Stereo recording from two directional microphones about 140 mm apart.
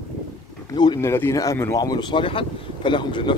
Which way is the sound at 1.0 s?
20° left (ahead or behind).